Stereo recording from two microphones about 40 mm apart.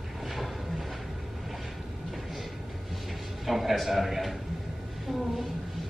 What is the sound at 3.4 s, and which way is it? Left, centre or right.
Speech, centre.